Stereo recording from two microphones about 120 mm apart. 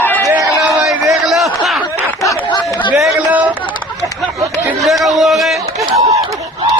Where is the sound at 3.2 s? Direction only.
10° right (ahead or behind).